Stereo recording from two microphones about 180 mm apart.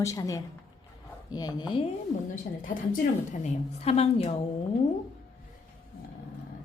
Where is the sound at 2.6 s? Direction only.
50° left (ahead or behind).